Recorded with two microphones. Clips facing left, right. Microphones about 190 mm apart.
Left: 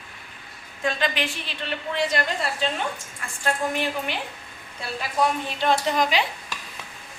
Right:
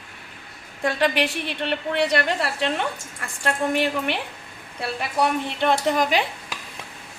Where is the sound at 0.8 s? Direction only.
65° right (ahead or behind).